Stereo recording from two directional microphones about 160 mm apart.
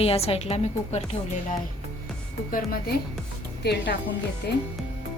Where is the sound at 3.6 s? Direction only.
90° left.